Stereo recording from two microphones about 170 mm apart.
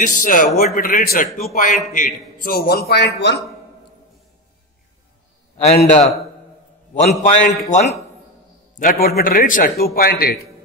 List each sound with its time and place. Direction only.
0.0 s a man's voice: 50° left (ahead or behind); by 3.3 s 85° left
5.6 s a man's voice: 40° left (ahead or behind); by 10.3 s 60° left (ahead or behind)